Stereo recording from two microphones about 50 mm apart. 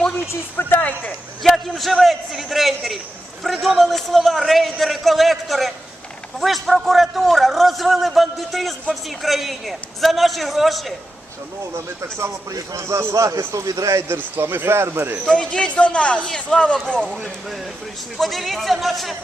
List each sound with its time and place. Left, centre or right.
0.5 s speech: left
1.5 s a man's voice: centre
12.7 s a man's voice: right
13.5 s a man's voice: right
14.1 s speech: right
15.3 s speech: centre
18.2 s a man's voice: centre